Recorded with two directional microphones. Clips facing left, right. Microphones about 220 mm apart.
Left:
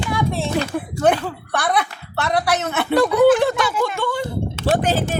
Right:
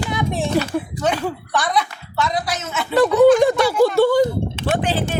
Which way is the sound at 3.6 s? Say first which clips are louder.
Right 7 dB; 35° right (ahead or behind).